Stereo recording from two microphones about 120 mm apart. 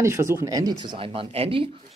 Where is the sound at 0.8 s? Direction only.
45° right (ahead or behind).